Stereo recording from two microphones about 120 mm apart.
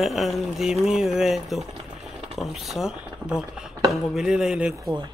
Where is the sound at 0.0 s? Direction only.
Centre (ahead or behind).